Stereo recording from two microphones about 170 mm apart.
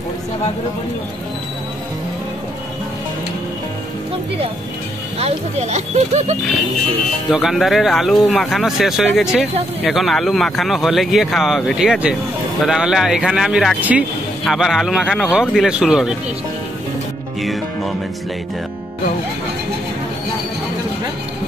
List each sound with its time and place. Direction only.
5.2 s speech: 40° right (ahead or behind)
7.2 s speech: centre (ahead or behind)
17.4 s speech: centre (ahead or behind)